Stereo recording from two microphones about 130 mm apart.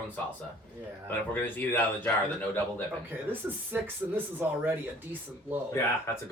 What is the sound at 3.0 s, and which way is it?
Speech, 15° right (ahead or behind).